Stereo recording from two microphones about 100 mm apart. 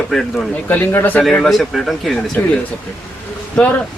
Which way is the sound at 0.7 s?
20° left (ahead or behind).